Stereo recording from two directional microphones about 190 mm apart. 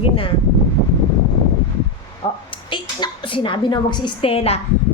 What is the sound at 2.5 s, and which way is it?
A woman's voice, 25° left (ahead or behind).